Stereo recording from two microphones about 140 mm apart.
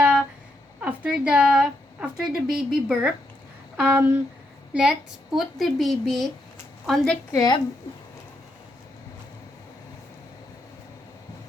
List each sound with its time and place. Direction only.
0.8 s a woman's voice: 10° right (ahead or behind)
7.3 s a woman's voice: 25° left (ahead or behind)